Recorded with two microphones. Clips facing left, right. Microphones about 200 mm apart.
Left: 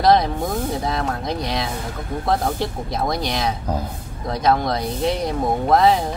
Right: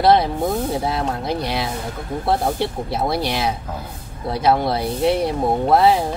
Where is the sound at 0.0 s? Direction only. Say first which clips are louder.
Right 1 dB; 5° right (ahead or behind).